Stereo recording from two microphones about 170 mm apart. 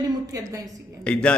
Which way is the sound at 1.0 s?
5° left (ahead or behind).